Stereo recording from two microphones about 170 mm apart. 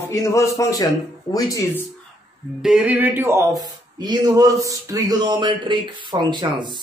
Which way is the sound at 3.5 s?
25° right (ahead or behind).